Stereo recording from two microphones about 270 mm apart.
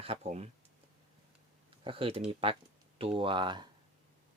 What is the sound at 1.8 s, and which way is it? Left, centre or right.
Speech, centre.